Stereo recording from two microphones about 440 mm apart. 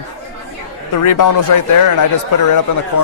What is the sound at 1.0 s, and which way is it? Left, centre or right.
Speech, left.